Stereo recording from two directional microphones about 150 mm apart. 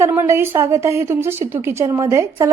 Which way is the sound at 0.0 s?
15° right (ahead or behind).